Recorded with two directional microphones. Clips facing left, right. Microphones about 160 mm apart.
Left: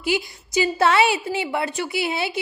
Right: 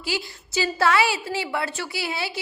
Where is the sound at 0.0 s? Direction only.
20° left (ahead or behind).